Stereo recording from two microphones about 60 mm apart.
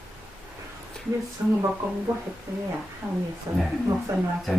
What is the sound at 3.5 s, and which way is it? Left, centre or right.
Speech, right.